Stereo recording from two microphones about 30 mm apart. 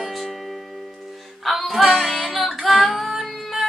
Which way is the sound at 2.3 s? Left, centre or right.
Centre.